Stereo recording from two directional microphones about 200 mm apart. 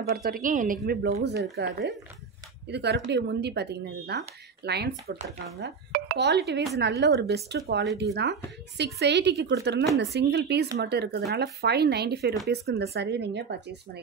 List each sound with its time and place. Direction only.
0.1 s a woman's voice: 50° right (ahead or behind)